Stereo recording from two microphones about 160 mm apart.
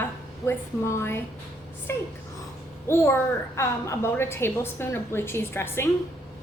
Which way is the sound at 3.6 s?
15° left (ahead or behind).